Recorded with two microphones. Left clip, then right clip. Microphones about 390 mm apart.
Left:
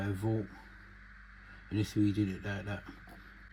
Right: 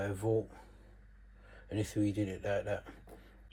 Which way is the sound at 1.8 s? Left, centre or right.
Centre.